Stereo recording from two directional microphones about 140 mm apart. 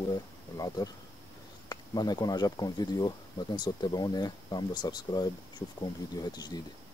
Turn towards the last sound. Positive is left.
turn(degrees=30)  # may be behind; listen again after turning